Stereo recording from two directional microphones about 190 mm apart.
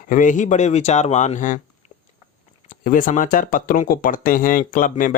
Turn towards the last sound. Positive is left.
turn(degrees=45)  # may be behind; listen again after turning